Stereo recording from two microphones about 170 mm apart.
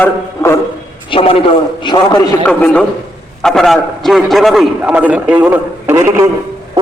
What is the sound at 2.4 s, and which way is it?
A man's voice, 5° left (ahead or behind).